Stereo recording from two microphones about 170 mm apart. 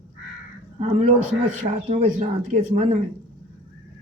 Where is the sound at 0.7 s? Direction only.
40° right (ahead or behind).